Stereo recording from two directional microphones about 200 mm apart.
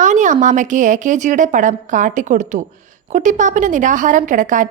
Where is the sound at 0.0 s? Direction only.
40° right (ahead or behind).